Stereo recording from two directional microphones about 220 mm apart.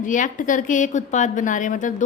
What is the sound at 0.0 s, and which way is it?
A woman's voice, 35° left (ahead or behind).